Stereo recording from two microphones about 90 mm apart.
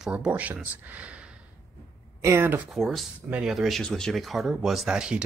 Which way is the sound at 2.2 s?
25° right (ahead or behind).